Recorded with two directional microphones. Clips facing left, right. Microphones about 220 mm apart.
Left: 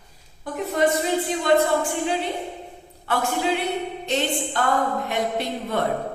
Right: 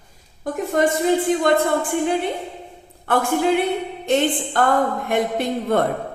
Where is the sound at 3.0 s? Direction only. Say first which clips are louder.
Right 5 dB; 50° right (ahead or behind).